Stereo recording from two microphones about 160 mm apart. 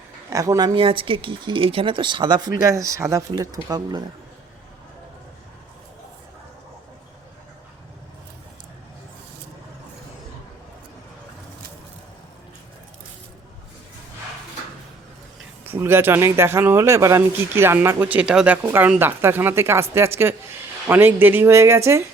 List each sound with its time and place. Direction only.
0.3 s speech: 20° right (ahead or behind)
15.6 s a man's voice: 15° right (ahead or behind)